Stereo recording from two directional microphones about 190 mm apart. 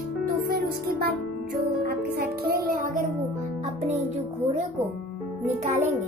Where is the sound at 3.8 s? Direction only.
35° right (ahead or behind).